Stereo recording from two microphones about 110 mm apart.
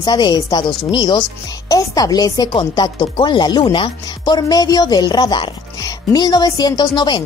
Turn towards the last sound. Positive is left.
turn(degrees=40)  # may be behind; listen again after turning